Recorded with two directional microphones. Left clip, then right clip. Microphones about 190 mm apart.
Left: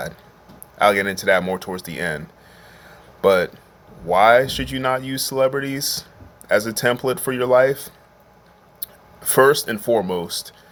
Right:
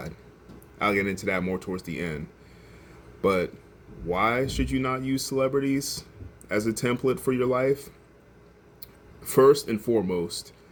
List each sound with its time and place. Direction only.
0.8 s speech: 10° right (ahead or behind)
8.8 s a sound: 10° right (ahead or behind)
9.7 s speech: 45° left (ahead or behind)
10.1 s speech: 10° right (ahead or behind)